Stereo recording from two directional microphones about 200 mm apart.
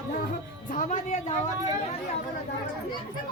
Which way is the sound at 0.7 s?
40° left (ahead or behind).